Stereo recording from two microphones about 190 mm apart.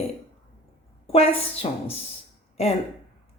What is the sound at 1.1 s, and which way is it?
A woman's voice, 30° left (ahead or behind).